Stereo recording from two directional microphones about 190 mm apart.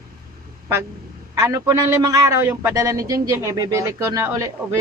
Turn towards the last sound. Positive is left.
turn(degrees=-15)  # may be behind; listen again after turning